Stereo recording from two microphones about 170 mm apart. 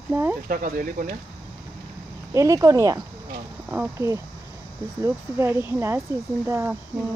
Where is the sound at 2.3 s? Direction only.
20° right (ahead or behind).